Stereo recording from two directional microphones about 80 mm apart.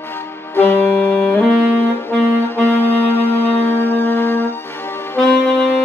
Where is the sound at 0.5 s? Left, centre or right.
Left.